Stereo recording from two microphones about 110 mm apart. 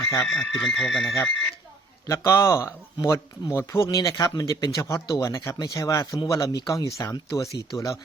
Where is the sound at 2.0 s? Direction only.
25° left (ahead or behind).